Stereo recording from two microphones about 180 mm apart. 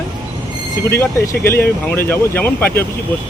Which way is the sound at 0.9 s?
15° left (ahead or behind).